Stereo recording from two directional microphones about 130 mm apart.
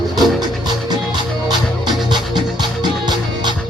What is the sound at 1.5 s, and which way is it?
Music, 35° right (ahead or behind).